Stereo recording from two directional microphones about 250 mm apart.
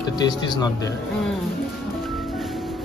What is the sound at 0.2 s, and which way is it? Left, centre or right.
Speech, centre.